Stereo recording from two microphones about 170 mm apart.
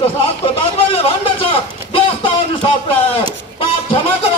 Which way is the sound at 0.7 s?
35° left (ahead or behind).